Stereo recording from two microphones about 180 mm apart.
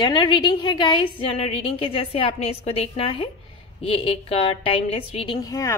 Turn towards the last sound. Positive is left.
turn(degrees=20)  # may be behind; listen again after turning